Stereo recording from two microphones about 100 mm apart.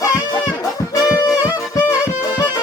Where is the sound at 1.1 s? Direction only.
35° left (ahead or behind).